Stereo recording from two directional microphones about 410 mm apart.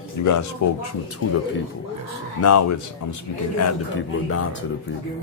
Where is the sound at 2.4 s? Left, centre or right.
Left.